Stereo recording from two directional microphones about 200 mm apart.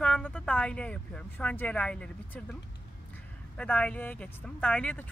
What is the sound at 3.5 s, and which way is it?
Speech, 5° left (ahead or behind).